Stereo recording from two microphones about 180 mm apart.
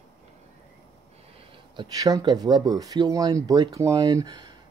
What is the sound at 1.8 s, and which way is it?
Speech, 20° right (ahead or behind).